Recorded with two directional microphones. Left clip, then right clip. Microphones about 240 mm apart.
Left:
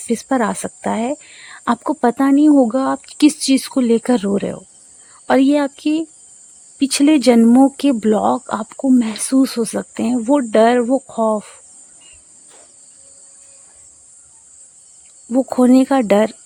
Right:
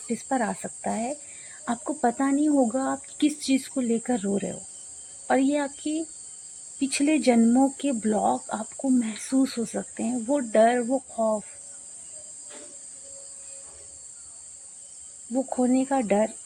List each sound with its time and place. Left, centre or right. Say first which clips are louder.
0.1 s speech: left 9 dB; left
15.3 s speech: left 11 dB; left